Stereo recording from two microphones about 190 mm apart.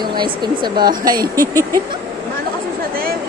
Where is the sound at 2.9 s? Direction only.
50° right (ahead or behind).